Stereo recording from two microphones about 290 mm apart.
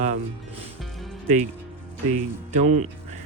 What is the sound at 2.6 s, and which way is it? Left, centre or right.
Speech, right.